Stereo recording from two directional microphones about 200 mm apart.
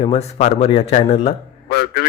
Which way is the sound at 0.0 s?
30° left (ahead or behind).